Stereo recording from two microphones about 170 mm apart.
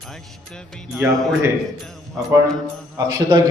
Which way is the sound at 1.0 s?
10° right (ahead or behind).